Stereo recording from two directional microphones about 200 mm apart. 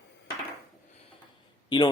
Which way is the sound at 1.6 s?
20° left (ahead or behind).